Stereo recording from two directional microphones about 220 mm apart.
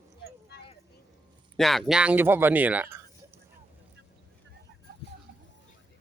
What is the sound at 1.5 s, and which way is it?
Speech, centre (ahead or behind).